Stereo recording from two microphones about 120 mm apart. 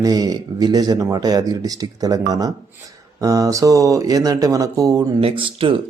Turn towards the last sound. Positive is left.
turn(degrees=-45)  # may be behind; listen again after turning